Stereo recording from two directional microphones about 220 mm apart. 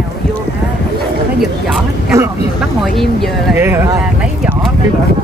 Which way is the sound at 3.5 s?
10° right (ahead or behind).